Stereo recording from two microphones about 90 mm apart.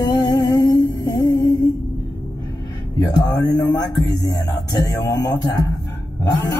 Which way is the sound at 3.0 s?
45° left (ahead or behind).